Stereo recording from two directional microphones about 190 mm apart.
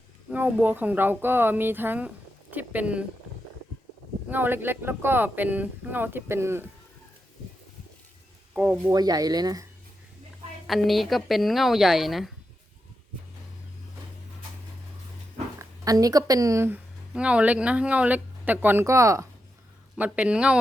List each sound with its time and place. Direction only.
0.3 s speech: 5° right (ahead or behind)
4.3 s speech: 10° right (ahead or behind)
8.9 s speech: 20° right (ahead or behind)
10.7 s speech: centre (ahead or behind)
15.8 s speech: 20° right (ahead or behind)